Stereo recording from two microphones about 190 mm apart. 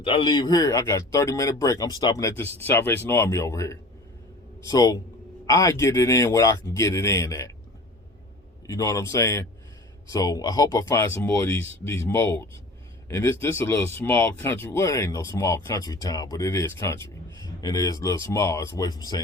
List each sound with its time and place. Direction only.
0.0 s speech: 30° left (ahead or behind)
8.6 s speech: 20° left (ahead or behind)